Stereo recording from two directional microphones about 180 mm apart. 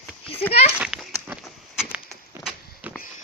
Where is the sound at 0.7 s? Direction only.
5° right (ahead or behind).